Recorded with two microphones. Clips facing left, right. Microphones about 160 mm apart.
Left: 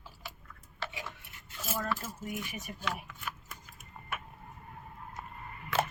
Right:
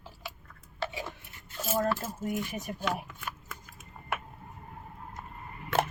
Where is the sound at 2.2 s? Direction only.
50° right (ahead or behind).